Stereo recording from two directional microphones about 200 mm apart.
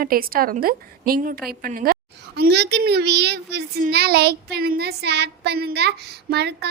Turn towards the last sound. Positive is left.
turn(degrees=-55)  # may be behind; listen again after turning